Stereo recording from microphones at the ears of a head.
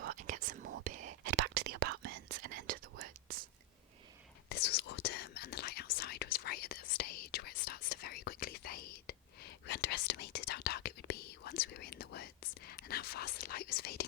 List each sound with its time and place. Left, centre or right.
0.0 s whispering: right
4.4 s whispering: left